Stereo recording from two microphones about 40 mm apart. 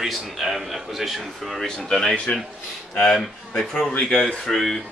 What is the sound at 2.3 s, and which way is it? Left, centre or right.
Speech, left.